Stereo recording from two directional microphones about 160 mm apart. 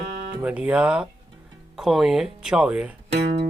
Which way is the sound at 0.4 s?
5° right (ahead or behind).